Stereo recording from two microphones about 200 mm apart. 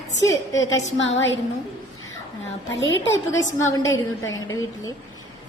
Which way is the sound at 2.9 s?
70° left (ahead or behind).